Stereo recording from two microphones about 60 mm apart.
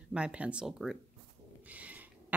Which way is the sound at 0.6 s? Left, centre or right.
Centre.